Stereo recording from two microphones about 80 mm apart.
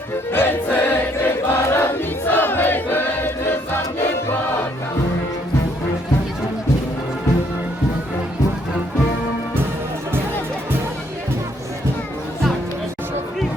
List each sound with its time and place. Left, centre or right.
0.3 s choir: left